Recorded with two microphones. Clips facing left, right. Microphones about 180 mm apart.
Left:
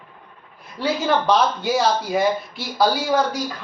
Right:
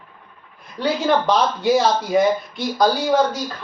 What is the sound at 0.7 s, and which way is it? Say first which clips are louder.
Speech: right 2 dB; centre (ahead or behind).